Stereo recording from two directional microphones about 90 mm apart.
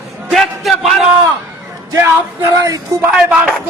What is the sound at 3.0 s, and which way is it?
Speech, 5° right (ahead or behind).